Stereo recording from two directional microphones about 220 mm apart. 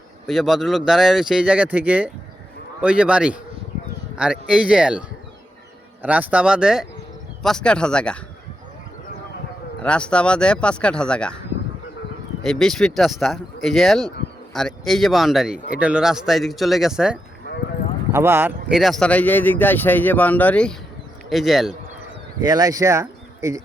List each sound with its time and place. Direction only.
0.3 s speech: centre (ahead or behind)
9.8 s speech: 5° left (ahead or behind)
12.4 s speech: centre (ahead or behind)
22.4 s speech: 15° right (ahead or behind)